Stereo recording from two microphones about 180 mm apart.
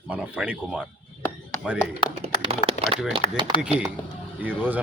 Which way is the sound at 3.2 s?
30° left (ahead or behind).